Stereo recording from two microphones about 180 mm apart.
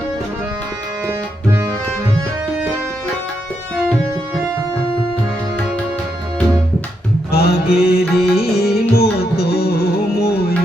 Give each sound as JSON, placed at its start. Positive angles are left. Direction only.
{"t": 1.0, "sound": "music", "side_deg": -15}
{"t": 7.3, "sound": "music", "side_deg": 60}